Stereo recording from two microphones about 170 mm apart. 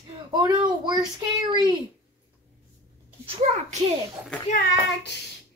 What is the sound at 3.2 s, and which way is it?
Speech, 40° right (ahead or behind).